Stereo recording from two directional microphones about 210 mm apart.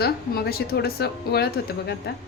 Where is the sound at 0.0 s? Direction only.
50° left (ahead or behind).